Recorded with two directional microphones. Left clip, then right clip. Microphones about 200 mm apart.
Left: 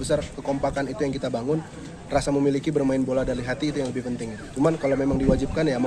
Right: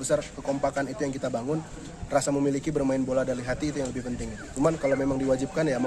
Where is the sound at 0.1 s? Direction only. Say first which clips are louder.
Left 2 dB; 5° right (ahead or behind).